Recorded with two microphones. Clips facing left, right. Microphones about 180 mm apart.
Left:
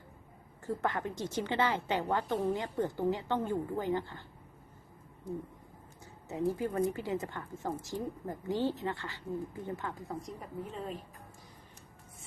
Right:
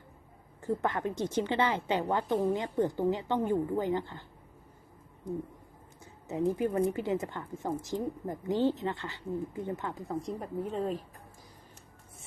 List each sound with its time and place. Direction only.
0.6 s a woman's voice: 20° right (ahead or behind)
6.2 s a woman's voice: 20° right (ahead or behind)
10.6 s a woman's voice: 35° right (ahead or behind)